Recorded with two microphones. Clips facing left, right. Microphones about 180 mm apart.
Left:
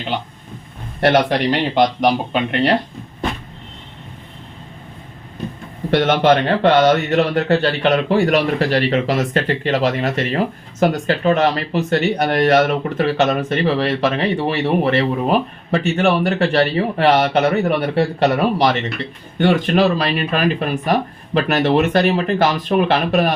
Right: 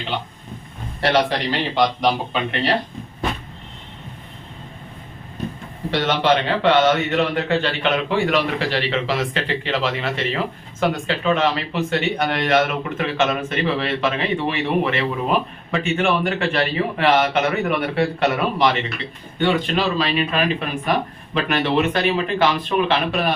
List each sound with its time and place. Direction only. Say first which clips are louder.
1.0 s speech: left 4 dB; 55° left (ahead or behind)
5.9 s a man's voice: left 5 dB; 50° left (ahead or behind)